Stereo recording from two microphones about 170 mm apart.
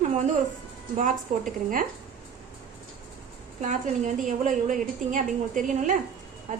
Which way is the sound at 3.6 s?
45° right (ahead or behind).